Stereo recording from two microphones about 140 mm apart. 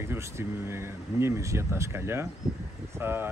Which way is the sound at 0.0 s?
20° right (ahead or behind).